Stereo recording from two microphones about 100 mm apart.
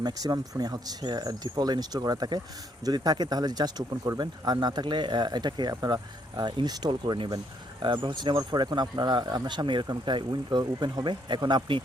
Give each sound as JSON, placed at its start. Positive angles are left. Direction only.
{"t": 0.0, "sound": "speech", "side_deg": -40}
{"t": 9.8, "sound": "speech", "side_deg": -40}